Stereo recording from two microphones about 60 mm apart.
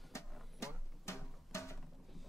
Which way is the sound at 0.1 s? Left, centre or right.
Left.